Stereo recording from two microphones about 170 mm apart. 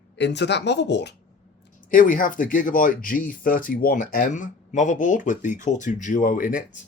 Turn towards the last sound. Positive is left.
turn(degrees=50)  # may be behind; listen again after turning